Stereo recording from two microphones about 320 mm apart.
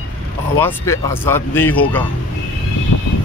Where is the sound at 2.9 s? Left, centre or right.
Left.